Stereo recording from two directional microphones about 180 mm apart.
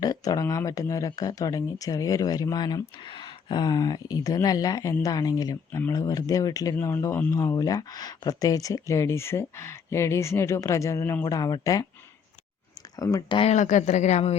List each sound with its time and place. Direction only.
0.0 s speech: 20° left (ahead or behind)
13.0 s speech: 20° left (ahead or behind)
13.5 s speech: 40° left (ahead or behind)